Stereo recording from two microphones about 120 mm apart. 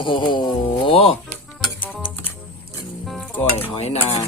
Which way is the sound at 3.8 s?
65° left (ahead or behind).